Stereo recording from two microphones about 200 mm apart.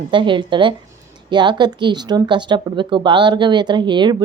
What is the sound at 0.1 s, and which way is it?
Speech, 25° right (ahead or behind).